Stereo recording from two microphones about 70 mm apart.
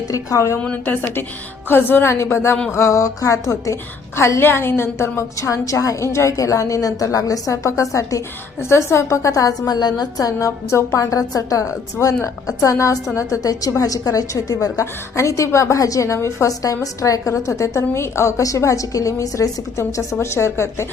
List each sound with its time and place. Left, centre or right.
0.1 s a woman's voice: left
0.6 s a woman's voice: left
1.6 s a woman's voice: left
4.2 s a woman's voice: left
10.7 s a woman's voice: left
11.0 s a woman's voice: left